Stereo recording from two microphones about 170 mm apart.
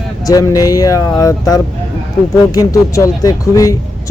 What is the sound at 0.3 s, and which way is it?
Speech, 20° left (ahead or behind).